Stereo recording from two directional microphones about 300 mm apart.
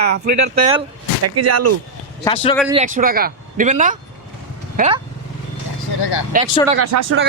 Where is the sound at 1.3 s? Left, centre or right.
Right.